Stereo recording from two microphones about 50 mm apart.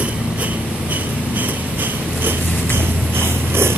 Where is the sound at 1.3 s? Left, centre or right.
Right.